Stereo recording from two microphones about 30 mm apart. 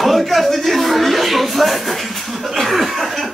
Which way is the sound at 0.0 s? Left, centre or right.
Centre.